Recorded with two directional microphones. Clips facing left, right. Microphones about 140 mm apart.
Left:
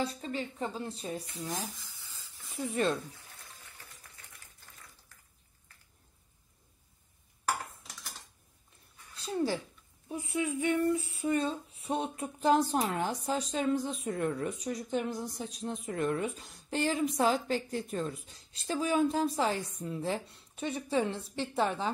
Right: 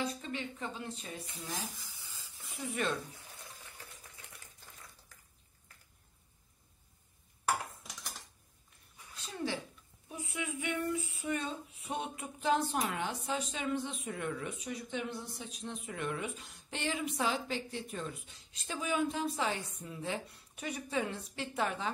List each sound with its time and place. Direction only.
0.0 s speech: 35° left (ahead or behind)
1.8 s a sound: 10° right (ahead or behind)
2.7 s speech: 30° left (ahead or behind)
9.1 s speech: 35° left (ahead or behind)